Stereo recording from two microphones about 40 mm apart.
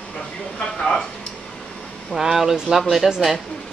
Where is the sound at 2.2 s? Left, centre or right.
Centre.